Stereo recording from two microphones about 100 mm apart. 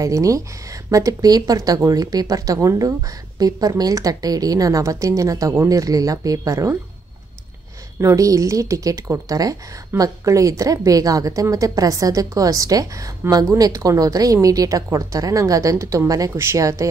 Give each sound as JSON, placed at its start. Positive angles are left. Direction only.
{"t": 0.0, "sound": "a woman's voice", "side_deg": -35}
{"t": 8.0, "sound": "a woman's voice", "side_deg": -30}